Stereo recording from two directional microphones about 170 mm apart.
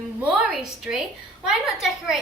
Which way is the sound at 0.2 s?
5° right (ahead or behind).